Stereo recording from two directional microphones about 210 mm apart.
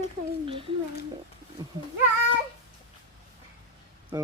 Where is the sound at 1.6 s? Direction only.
20° right (ahead or behind).